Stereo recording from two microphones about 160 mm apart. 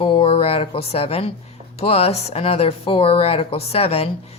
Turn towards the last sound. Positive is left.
turn(degrees=40)  # may be behind; listen again after turning